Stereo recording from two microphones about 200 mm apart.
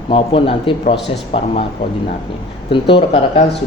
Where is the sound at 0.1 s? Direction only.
25° left (ahead or behind).